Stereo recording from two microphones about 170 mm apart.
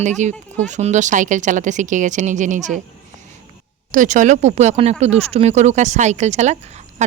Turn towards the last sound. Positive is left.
turn(degrees=-40)  # may be behind; listen again after turning